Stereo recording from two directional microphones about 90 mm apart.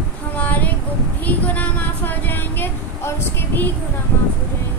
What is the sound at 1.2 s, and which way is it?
Speech, 20° left (ahead or behind).